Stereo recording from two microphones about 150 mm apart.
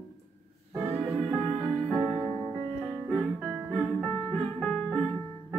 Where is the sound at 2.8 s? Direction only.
Centre (ahead or behind).